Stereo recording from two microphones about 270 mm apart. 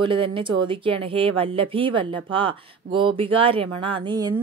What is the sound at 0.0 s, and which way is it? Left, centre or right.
A woman's voice, centre.